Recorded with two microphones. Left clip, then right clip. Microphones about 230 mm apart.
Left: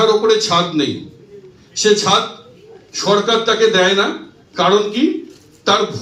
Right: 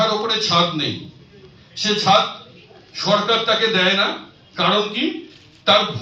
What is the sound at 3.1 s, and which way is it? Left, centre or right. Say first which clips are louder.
Speech: left 3 dB; left.